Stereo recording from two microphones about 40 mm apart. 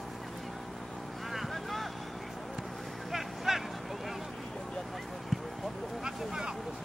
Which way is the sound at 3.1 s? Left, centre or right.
Centre.